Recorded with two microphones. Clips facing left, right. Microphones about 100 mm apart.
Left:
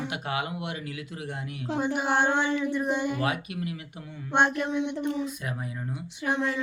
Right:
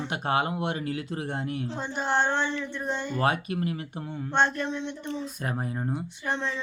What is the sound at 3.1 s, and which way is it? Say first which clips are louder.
Speech: right 3 dB; 40° right (ahead or behind).